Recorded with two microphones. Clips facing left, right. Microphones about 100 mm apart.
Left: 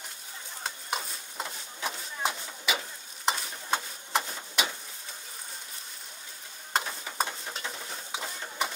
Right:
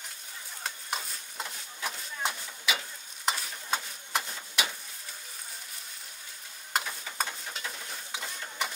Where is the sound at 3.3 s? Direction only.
5° left (ahead or behind).